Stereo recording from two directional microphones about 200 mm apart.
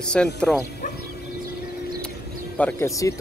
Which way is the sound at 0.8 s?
40° left (ahead or behind).